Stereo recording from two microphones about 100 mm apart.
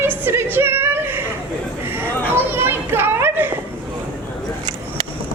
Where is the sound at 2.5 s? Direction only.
20° right (ahead or behind).